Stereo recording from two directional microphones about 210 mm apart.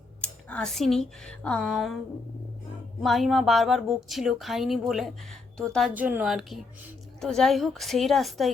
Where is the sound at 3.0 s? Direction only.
Centre (ahead or behind).